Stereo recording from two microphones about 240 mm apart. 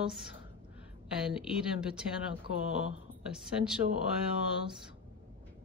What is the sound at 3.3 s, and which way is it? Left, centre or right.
Speech, centre.